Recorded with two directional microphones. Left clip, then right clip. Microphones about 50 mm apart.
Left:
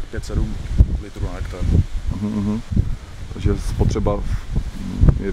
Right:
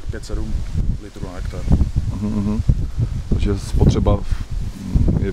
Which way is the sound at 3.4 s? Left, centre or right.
Right.